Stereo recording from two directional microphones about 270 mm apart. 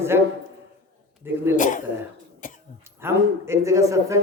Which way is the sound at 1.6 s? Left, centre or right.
Left.